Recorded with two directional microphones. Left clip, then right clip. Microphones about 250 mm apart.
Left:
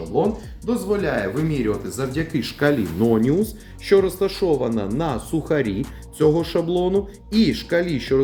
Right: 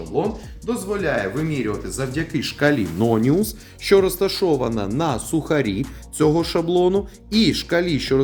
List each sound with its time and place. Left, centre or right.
0.2 s speech: centre; by 8.2 s right